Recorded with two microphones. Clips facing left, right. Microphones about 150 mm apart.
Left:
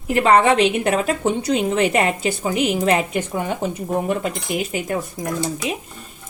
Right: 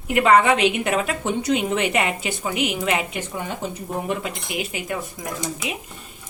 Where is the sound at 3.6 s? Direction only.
55° left (ahead or behind).